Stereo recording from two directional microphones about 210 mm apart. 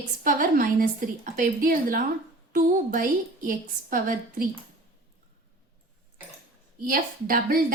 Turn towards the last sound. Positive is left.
turn(degrees=-40)  # may be behind; listen again after turning